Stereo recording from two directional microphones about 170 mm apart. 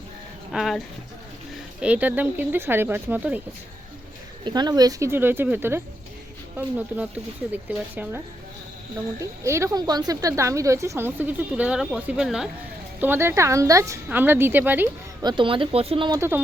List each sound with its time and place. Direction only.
0.5 s speech: centre (ahead or behind)
1.8 s a woman's voice: 10° right (ahead or behind)
4.4 s a woman's voice: 25° right (ahead or behind)
9.2 s a woman's voice: 15° right (ahead or behind)
15.2 s speech: 25° right (ahead or behind)
16.1 s a woman's voice: 15° right (ahead or behind)